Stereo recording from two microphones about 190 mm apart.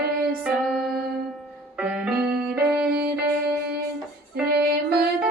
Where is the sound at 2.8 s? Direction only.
55° right (ahead or behind).